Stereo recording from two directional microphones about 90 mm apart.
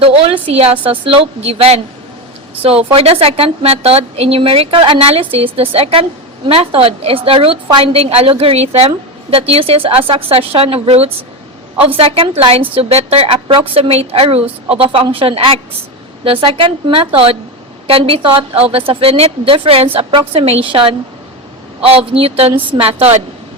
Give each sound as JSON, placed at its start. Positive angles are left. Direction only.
{"t": 0.0, "sound": "a woman's voice", "side_deg": -85}
{"t": 11.9, "sound": "a woman's voice", "side_deg": -90}
{"t": 21.9, "sound": "a woman's voice", "side_deg": -90}